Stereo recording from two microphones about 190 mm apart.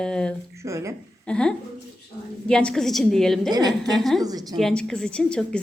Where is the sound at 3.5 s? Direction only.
20° right (ahead or behind).